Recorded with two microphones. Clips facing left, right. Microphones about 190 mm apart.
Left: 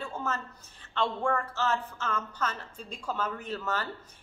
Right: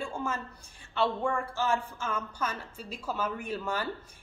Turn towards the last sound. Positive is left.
turn(degrees=-10)  # may be behind; listen again after turning